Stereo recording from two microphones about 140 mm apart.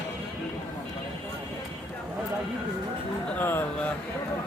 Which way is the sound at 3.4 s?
15° left (ahead or behind).